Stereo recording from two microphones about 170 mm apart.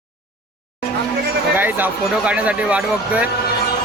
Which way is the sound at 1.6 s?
10° right (ahead or behind).